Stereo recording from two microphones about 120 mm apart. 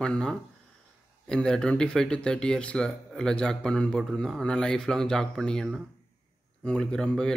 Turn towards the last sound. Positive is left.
turn(degrees=5)  # may be behind; listen again after turning